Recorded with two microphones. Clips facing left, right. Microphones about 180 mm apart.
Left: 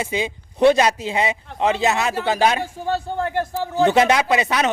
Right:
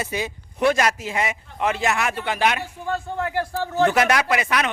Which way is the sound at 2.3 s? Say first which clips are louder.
Left 5 dB; 30° left (ahead or behind).